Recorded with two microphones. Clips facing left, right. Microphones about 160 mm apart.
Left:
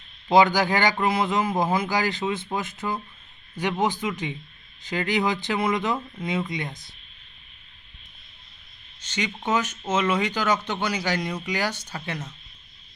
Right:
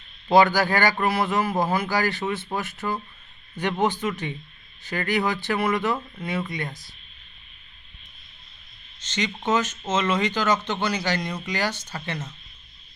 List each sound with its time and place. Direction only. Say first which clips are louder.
0.3 s speech: even; 15° left (ahead or behind)
9.0 s speech: right 1 dB; 10° left (ahead or behind)